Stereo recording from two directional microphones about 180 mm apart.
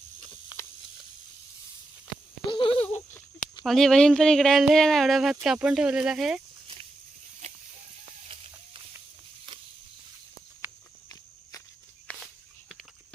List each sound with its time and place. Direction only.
2.5 s a sound: 30° left (ahead or behind)
3.6 s speech: centre (ahead or behind)
7.4 s livestock: 40° right (ahead or behind)
10.6 s walk: 10° right (ahead or behind)
12.0 s walk: centre (ahead or behind)